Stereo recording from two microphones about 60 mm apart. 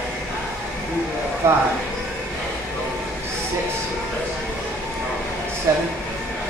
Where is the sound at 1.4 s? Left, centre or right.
Right.